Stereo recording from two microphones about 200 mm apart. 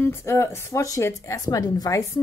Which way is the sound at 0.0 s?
15° left (ahead or behind).